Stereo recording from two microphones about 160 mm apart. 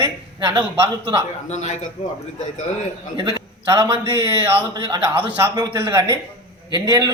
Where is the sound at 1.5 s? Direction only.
45° left (ahead or behind).